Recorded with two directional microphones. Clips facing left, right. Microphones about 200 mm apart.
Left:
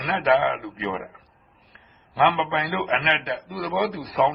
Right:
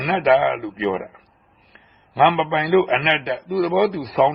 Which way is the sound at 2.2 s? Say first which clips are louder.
Right 4 dB; 20° right (ahead or behind).